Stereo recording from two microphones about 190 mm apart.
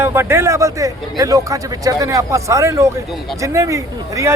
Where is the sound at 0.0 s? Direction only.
10° right (ahead or behind).